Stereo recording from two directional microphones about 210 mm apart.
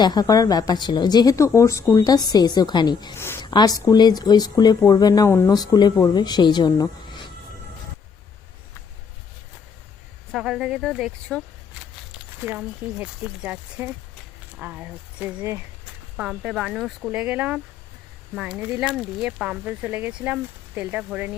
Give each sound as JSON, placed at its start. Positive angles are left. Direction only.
{"t": 0.0, "sound": "a woman's voice", "side_deg": 20}
{"t": 10.3, "sound": "speech", "side_deg": 0}